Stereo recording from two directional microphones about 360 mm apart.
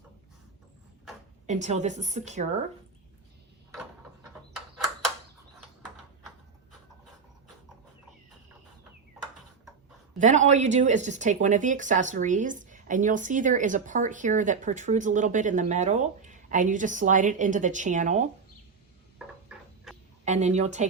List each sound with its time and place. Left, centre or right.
1.5 s speech: centre
10.2 s speech: centre
20.2 s speech: centre